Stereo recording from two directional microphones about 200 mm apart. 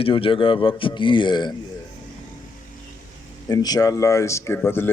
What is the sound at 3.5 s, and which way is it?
Speech, 20° left (ahead or behind).